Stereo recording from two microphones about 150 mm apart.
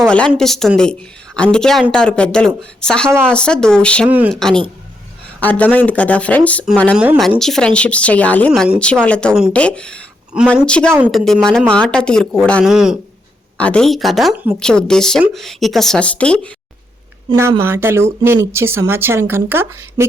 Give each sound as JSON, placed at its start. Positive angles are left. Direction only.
{"t": 0.0, "sound": "a woman's voice", "side_deg": 5}
{"t": 6.9, "sound": "a woman's voice", "side_deg": -10}
{"t": 7.2, "sound": "speech", "side_deg": 5}
{"t": 10.3, "sound": "a woman's voice", "side_deg": -5}
{"t": 10.7, "sound": "a woman's voice", "side_deg": 5}
{"t": 13.6, "sound": "a woman's voice", "side_deg": 5}
{"t": 14.3, "sound": "a woman's voice", "side_deg": -10}
{"t": 14.6, "sound": "a woman's voice", "side_deg": 5}
{"t": 17.6, "sound": "a woman's voice", "side_deg": -15}